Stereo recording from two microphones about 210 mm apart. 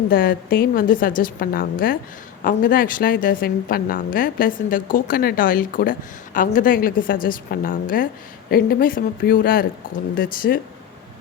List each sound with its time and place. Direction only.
0.1 s speech: 45° left (ahead or behind)